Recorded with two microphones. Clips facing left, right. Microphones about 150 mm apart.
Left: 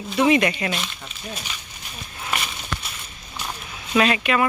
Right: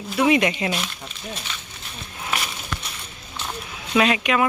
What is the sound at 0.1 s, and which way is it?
Speech, 5° right (ahead or behind).